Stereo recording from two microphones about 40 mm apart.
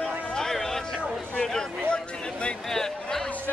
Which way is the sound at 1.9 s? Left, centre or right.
Left.